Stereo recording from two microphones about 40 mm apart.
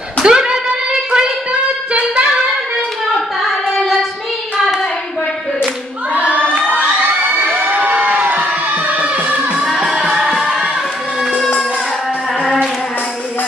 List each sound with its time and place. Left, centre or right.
0.2 s a sound: right
6.2 s crowd: left
6.7 s children shouting: right
7.1 s children shouting: right
7.7 s a sound: right
9.0 s music: right
9.6 s music: centre